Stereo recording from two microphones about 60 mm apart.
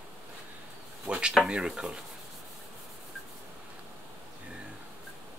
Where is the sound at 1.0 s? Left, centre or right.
Centre.